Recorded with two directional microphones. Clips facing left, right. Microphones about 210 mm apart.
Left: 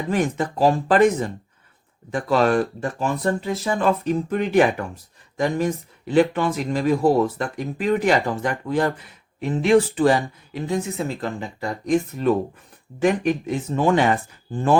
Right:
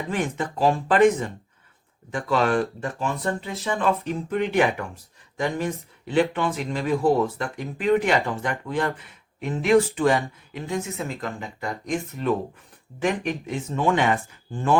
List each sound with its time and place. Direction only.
0.1 s speech: 40° left (ahead or behind)